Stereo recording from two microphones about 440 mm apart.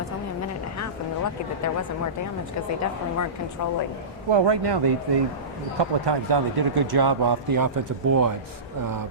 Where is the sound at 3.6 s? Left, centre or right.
Left.